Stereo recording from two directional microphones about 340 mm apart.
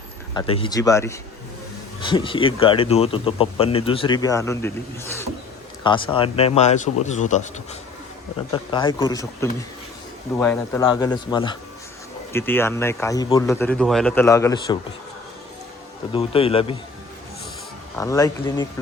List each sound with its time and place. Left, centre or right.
0.3 s a man's voice: centre
16.1 s a man's voice: centre
17.9 s a man's voice: centre